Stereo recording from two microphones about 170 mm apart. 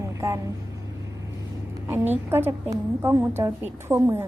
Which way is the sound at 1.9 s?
10° right (ahead or behind).